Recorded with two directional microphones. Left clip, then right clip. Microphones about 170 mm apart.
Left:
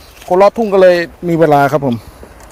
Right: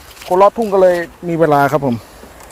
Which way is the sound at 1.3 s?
10° left (ahead or behind).